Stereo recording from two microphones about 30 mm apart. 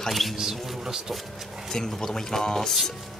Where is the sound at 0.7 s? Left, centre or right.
Centre.